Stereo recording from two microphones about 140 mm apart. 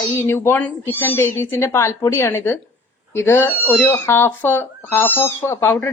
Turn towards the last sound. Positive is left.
turn(degrees=15)  # may be behind; listen again after turning